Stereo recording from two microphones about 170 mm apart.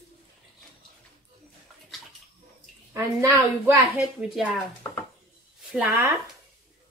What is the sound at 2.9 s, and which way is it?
A woman's voice, 20° right (ahead or behind).